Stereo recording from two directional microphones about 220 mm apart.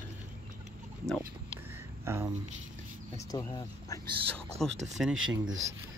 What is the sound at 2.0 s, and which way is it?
Speech, 10° right (ahead or behind).